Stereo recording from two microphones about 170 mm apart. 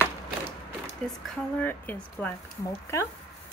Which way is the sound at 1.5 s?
10° left (ahead or behind).